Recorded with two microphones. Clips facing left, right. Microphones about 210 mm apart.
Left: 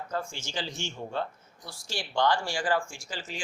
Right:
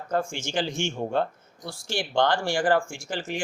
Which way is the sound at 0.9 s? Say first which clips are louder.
Right 6 dB; 50° right (ahead or behind).